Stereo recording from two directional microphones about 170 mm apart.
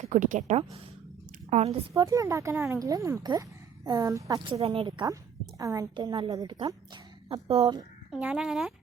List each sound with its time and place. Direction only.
0.0 s a woman's voice: 50° right (ahead or behind)
1.9 s speech: 20° right (ahead or behind); by 7.8 s 35° right (ahead or behind)
8.1 s speech: 5° right (ahead or behind)